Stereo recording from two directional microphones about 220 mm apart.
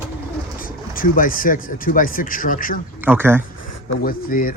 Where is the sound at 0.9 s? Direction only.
40° left (ahead or behind).